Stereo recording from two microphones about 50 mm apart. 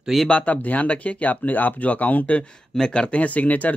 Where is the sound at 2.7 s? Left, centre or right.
Centre.